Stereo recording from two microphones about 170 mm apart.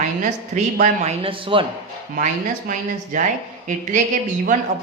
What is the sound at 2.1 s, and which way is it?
Speech, 50° right (ahead or behind).